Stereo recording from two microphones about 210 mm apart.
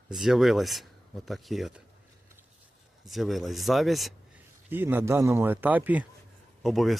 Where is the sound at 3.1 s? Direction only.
Centre (ahead or behind).